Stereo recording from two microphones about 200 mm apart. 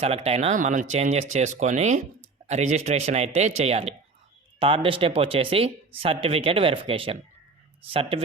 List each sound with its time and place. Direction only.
0.0 s speech: 30° right (ahead or behind)